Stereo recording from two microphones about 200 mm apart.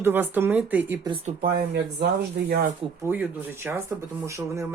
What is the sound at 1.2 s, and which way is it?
Speech, 45° right (ahead or behind).